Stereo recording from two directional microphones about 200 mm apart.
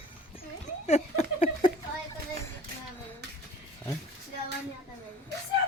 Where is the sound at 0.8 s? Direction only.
35° left (ahead or behind).